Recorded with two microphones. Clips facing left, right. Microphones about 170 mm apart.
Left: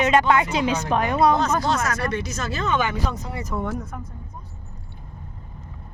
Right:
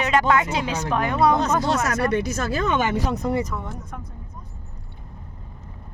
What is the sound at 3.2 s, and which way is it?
Speech, 50° right (ahead or behind).